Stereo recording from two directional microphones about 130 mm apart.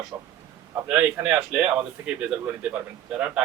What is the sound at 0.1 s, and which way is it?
A man's voice, 20° right (ahead or behind).